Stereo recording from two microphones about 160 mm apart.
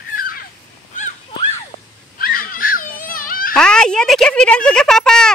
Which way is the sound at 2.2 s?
65° left (ahead or behind).